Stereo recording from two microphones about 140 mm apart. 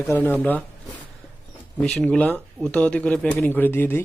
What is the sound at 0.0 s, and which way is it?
Speech, 10° left (ahead or behind).